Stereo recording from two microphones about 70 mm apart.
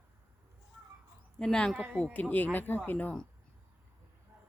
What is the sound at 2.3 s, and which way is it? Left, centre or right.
Speech, left.